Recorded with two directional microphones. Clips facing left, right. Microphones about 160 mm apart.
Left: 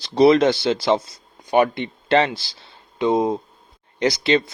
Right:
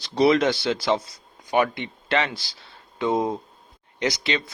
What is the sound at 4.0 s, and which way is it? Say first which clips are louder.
Speech: left 7 dB; 35° left (ahead or behind).